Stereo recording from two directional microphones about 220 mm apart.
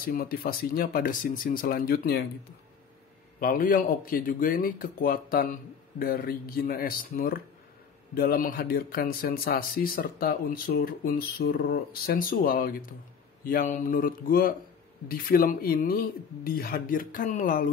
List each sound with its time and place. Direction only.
0.1 s speech: 45° left (ahead or behind)
3.3 s a man's voice: 40° left (ahead or behind)